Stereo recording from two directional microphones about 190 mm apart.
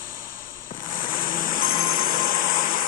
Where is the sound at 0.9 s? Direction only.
45° left (ahead or behind).